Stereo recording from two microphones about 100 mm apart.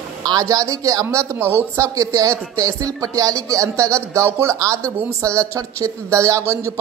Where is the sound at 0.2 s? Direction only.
40° right (ahead or behind).